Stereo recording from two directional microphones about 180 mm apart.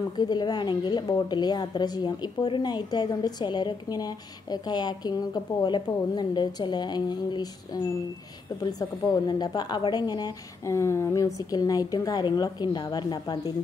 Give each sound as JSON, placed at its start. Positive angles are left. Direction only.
{"t": 0.2, "sound": "a woman's voice", "side_deg": 25}